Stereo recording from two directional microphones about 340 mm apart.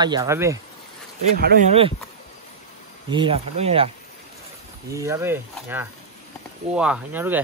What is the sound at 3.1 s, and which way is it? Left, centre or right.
Speech, centre.